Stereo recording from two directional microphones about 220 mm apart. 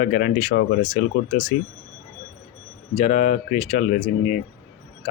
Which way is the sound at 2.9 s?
30° left (ahead or behind).